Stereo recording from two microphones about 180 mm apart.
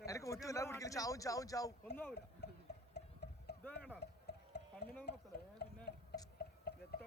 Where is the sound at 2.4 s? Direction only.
65° left (ahead or behind).